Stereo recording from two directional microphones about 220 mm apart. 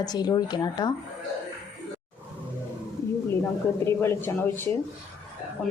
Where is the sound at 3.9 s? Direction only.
10° left (ahead or behind).